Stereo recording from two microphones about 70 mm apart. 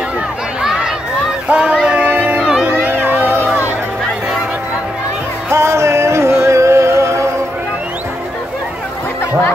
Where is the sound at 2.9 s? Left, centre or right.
Right.